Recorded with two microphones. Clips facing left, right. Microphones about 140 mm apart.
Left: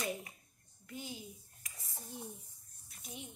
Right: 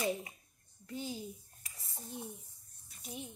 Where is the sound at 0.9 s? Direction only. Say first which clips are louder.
Right 5 dB; 30° right (ahead or behind).